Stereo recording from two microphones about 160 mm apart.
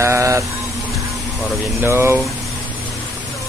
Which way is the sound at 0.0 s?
20° right (ahead or behind).